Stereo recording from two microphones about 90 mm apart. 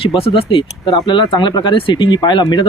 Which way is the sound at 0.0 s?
90° left.